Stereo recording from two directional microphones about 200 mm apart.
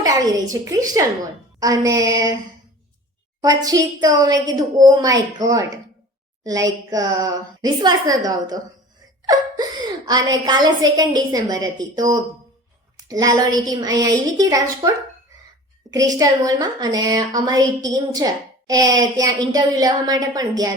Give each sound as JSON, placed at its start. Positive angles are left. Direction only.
{"t": 0.0, "sound": "a woman's voice", "side_deg": -20}
{"t": 3.6, "sound": "a woman's voice", "side_deg": -15}
{"t": 15.9, "sound": "a woman's voice", "side_deg": -15}